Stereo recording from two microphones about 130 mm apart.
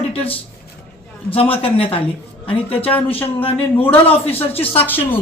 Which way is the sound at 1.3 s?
45° left (ahead or behind).